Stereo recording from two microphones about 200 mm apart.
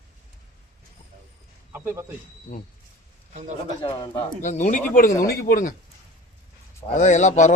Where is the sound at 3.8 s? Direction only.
25° left (ahead or behind).